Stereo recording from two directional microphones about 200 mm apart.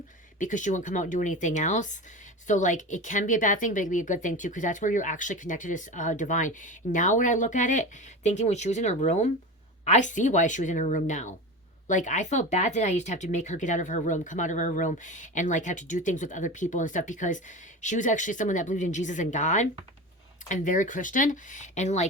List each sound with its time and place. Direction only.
0.3 s speech: 40° left (ahead or behind)